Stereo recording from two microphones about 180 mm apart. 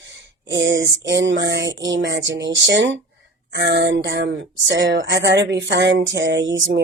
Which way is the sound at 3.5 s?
70° right (ahead or behind).